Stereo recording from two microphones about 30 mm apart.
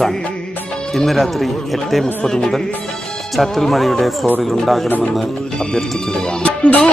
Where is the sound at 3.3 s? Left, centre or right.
Centre.